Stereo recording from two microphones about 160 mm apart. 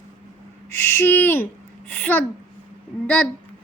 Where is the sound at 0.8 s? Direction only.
15° left (ahead or behind).